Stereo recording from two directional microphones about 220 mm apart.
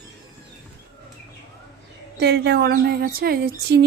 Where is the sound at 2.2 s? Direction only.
50° right (ahead or behind).